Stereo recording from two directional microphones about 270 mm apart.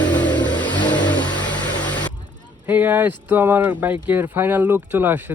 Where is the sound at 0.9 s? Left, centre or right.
Centre.